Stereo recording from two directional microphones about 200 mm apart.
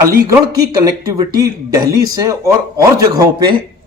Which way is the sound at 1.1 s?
15° right (ahead or behind).